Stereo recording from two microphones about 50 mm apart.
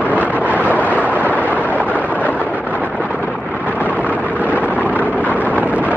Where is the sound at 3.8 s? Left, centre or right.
Left.